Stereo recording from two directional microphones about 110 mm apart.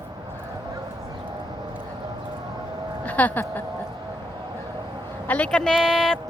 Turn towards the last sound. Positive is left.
turn(degrees=5)  # may be behind; listen again after turning